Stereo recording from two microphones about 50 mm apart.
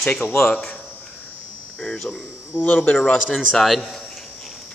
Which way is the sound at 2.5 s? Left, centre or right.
Left.